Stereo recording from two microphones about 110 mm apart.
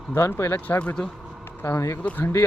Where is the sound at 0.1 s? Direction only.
20° left (ahead or behind).